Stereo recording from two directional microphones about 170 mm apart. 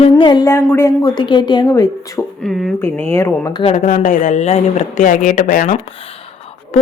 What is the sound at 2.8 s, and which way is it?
Speech, 15° left (ahead or behind).